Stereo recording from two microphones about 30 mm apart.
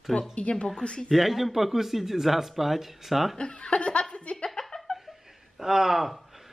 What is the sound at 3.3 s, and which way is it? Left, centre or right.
Chuckle, left.